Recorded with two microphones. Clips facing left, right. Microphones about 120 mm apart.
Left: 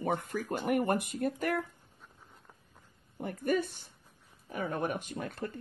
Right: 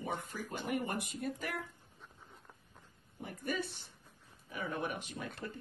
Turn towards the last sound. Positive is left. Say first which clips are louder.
# left 5 dB
turn(degrees=50)  # may be behind; listen again after turning